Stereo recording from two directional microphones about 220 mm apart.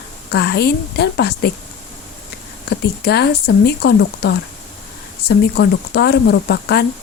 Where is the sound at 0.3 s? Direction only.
50° left (ahead or behind).